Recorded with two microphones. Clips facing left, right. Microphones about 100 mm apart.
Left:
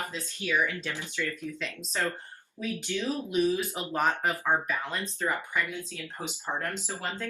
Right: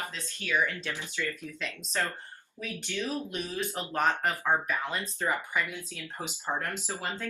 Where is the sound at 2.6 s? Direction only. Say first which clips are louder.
Left 3 dB; 15° left (ahead or behind).